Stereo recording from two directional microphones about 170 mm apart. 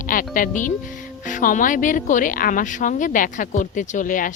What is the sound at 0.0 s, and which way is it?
Music, 55° left (ahead or behind).